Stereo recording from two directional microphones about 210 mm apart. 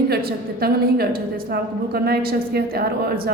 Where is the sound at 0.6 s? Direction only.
45° right (ahead or behind).